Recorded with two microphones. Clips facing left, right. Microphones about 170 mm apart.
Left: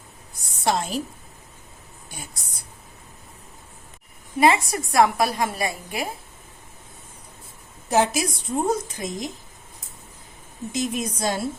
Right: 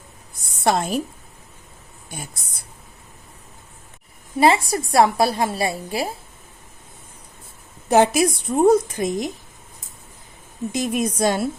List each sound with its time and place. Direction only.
0.6 s a woman's voice: 55° right (ahead or behind)
4.4 s a woman's voice: 30° right (ahead or behind)
7.9 s a woman's voice: 60° right (ahead or behind)
10.7 s a woman's voice: 60° right (ahead or behind)